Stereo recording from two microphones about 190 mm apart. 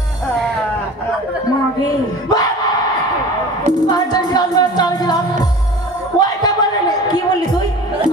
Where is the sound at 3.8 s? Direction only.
20° left (ahead or behind).